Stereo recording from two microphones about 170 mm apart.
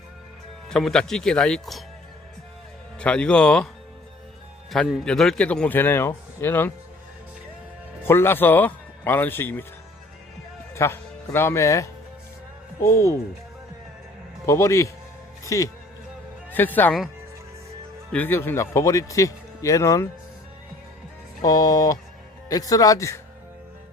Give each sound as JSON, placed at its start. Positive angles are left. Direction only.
{"t": 0.7, "sound": "speech", "side_deg": 0}
{"t": 3.0, "sound": "a man's voice", "side_deg": 5}
{"t": 4.7, "sound": "a man's voice", "side_deg": 0}
{"t": 8.0, "sound": "a man's voice", "side_deg": 15}
{"t": 10.8, "sound": "a man's voice", "side_deg": 15}
{"t": 14.4, "sound": "a man's voice", "side_deg": 15}
{"t": 18.1, "sound": "a man's voice", "side_deg": 10}
{"t": 21.4, "sound": "speech", "side_deg": 20}